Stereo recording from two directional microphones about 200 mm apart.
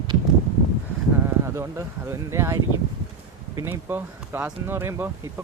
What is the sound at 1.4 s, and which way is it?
Speech, 15° right (ahead or behind).